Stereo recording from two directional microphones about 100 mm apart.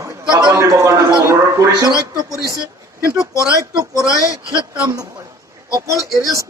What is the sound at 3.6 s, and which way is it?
Speech, 35° right (ahead or behind).